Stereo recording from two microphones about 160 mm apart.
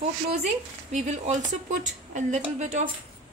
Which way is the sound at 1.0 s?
45° right (ahead or behind).